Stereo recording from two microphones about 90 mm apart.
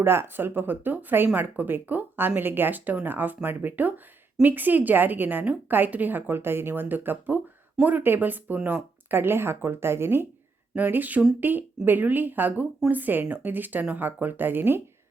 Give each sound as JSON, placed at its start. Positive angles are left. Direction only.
{"t": 0.0, "sound": "a woman's voice", "side_deg": -25}
{"t": 10.8, "sound": "a woman's voice", "side_deg": -20}